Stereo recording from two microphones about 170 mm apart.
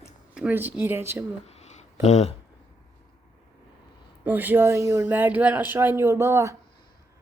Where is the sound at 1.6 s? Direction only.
40° left (ahead or behind).